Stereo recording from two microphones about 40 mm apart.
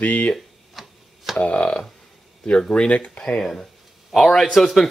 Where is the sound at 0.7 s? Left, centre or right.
Centre.